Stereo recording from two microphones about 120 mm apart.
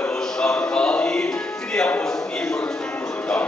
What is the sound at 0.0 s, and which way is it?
Music, 5° left (ahead or behind).